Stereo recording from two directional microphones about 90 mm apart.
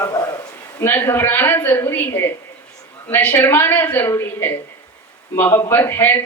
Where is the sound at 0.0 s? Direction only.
35° left (ahead or behind).